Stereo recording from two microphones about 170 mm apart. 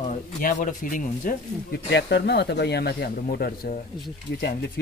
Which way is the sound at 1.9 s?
75° left (ahead or behind).